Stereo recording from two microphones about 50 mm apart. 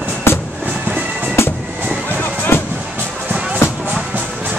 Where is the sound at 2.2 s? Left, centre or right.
Left.